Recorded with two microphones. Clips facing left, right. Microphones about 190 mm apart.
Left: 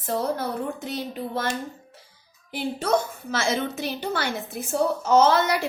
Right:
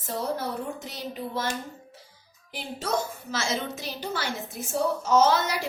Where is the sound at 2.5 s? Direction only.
60° left (ahead or behind).